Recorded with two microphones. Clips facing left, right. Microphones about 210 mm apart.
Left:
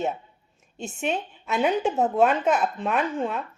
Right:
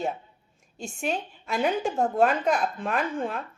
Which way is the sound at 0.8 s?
5° left (ahead or behind).